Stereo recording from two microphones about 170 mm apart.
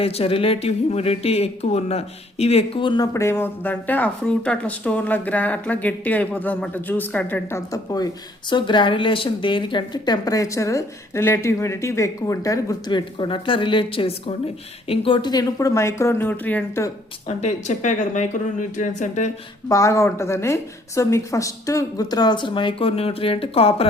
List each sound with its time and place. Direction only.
0.0 s speech: 35° left (ahead or behind)
3.1 s speech: 15° left (ahead or behind)
17.2 s speech: 40° left (ahead or behind)
19.6 s speech: 20° left (ahead or behind); by 23.8 s 35° left (ahead or behind)